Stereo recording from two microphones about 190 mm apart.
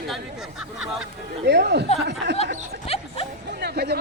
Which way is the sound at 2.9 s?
30° left (ahead or behind).